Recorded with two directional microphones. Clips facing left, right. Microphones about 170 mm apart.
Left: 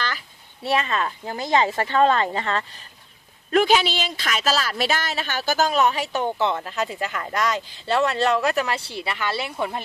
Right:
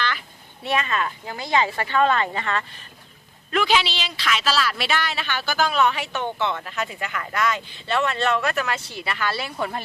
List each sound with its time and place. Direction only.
0.6 s speech: 35° left (ahead or behind)
3.5 s speech: 45° left (ahead or behind); by 9.6 s 25° left (ahead or behind)